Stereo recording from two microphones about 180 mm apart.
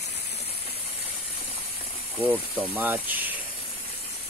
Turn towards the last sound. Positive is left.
turn(degrees=-10)  # may be behind; listen again after turning